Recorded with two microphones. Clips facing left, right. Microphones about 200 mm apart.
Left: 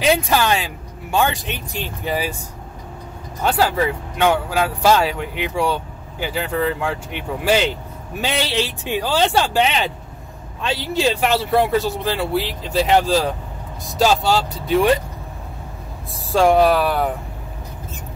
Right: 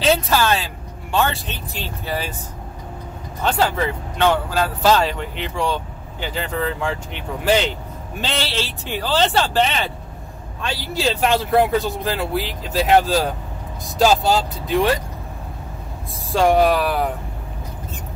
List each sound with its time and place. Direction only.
0.0 s a woman's voice: 15° left (ahead or behind)
3.4 s speech: 5° left (ahead or behind); by 11.0 s 25° left (ahead or behind)
11.1 s speech: 5° left (ahead or behind)
16.3 s speech: centre (ahead or behind)